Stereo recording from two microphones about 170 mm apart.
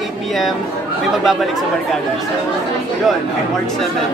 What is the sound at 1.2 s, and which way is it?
Speech, centre (ahead or behind).